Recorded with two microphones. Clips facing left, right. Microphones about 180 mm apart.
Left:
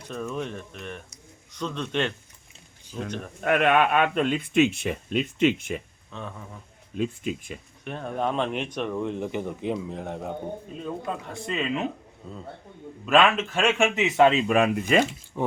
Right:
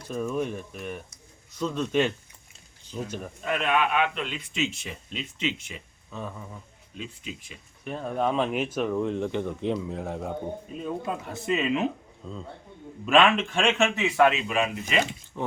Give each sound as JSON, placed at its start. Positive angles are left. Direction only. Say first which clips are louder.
{"t": 0.1, "sound": "speech", "louder": "right 3 dB", "side_deg": -10}
{"t": 3.4, "sound": "speech", "louder": "left 5 dB", "side_deg": 60}
{"t": 6.1, "sound": "speech", "louder": "right 2 dB", "side_deg": -5}
{"t": 6.9, "sound": "speech", "louder": "left 10 dB", "side_deg": 50}
{"t": 7.9, "sound": "speech", "louder": "right 1 dB", "side_deg": 0}
{"t": 11.4, "sound": "speech", "louder": "right 3 dB", "side_deg": -5}
{"t": 13.1, "sound": "a man's voice", "louder": "even", "side_deg": 0}
{"t": 14.4, "sound": "speech", "louder": "left 6 dB", "side_deg": 50}
{"t": 15.3, "sound": "speech", "louder": "left 4 dB", "side_deg": 10}